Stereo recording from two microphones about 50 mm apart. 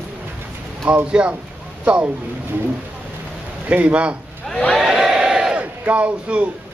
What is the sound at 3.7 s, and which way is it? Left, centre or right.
Speech, right.